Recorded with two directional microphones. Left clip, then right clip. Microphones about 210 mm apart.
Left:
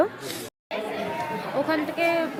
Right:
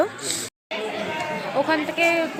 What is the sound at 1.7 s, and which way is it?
Speech, centre (ahead or behind).